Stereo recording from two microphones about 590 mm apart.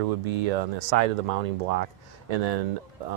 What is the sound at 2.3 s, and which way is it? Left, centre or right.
Speech, right.